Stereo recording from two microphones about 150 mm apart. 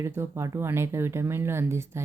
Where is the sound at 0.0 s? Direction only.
20° right (ahead or behind).